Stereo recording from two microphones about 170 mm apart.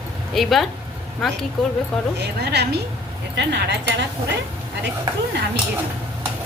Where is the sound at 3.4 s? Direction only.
90° right.